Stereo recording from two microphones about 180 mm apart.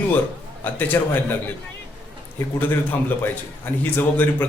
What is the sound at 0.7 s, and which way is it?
Speech, 10° left (ahead or behind).